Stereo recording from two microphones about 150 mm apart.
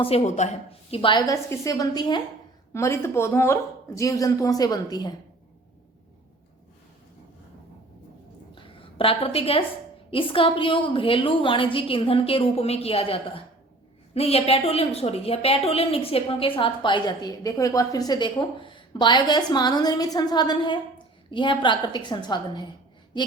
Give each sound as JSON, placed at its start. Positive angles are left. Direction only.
{"t": 0.0, "sound": "a woman's voice", "side_deg": 45}
{"t": 1.3, "sound": "a woman's voice", "side_deg": 20}
{"t": 2.7, "sound": "a woman's voice", "side_deg": 20}
{"t": 8.5, "sound": "a sound", "side_deg": 35}
{"t": 10.1, "sound": "a woman's voice", "side_deg": 35}